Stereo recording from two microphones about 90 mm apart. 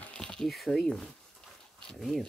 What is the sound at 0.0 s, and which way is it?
Speech, 10° left (ahead or behind).